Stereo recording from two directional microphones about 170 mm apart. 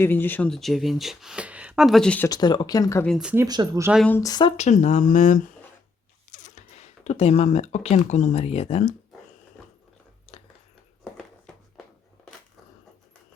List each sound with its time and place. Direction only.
0.0 s speech: 10° left (ahead or behind)
2.3 s speech: 25° left (ahead or behind)
3.2 s speech: 5° right (ahead or behind)
3.4 s speech: 25° right (ahead or behind)
3.9 s a woman's voice: 5° left (ahead or behind)
4.2 s speech: 25° left (ahead or behind)
4.5 s speech: 45° left (ahead or behind)
11.0 s a sound: 5° left (ahead or behind)